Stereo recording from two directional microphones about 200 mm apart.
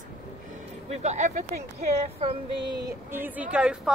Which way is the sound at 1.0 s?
35° right (ahead or behind).